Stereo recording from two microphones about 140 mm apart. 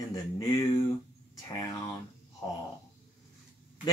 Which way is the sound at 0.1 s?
25° left (ahead or behind).